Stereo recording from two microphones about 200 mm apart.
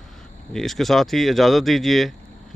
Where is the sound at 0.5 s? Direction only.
Centre (ahead or behind).